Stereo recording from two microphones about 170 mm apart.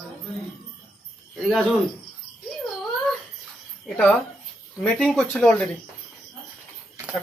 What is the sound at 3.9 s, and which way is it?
Speech, 5° left (ahead or behind).